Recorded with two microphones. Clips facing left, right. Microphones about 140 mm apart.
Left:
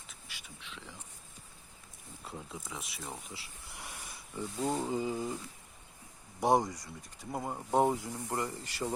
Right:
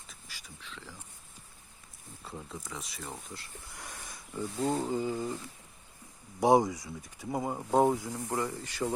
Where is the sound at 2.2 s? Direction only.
5° left (ahead or behind).